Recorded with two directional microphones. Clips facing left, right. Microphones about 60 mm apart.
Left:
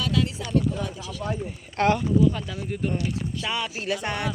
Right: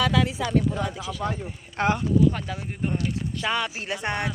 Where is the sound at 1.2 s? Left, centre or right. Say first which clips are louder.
Right 1 dB; right.